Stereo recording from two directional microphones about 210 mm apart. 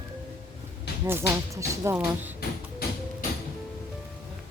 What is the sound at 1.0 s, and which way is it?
Speech, 10° right (ahead or behind).